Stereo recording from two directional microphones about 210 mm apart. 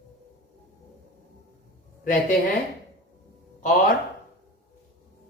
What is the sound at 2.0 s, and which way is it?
Speech, 40° left (ahead or behind).